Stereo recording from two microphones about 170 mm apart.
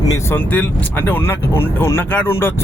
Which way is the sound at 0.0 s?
20° left (ahead or behind).